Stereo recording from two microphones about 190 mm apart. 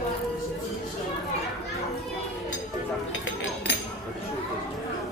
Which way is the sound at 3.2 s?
90° left.